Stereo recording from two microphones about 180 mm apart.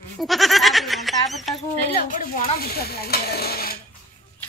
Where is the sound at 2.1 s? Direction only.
55° left (ahead or behind).